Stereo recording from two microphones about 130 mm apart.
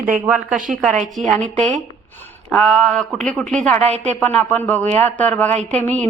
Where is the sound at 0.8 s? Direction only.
Centre (ahead or behind).